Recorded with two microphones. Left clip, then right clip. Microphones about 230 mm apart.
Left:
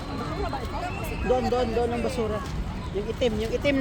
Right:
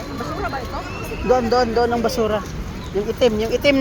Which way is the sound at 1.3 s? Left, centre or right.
Right.